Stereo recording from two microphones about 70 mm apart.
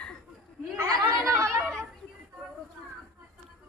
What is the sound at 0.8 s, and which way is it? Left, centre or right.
Chatter, right.